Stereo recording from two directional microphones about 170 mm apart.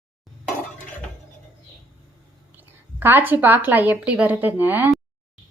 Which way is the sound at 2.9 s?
10° right (ahead or behind).